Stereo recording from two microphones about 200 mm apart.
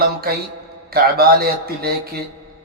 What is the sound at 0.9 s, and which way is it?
A man's voice, 50° right (ahead or behind).